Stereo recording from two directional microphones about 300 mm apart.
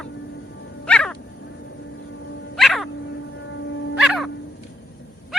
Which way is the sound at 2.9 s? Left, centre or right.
Left.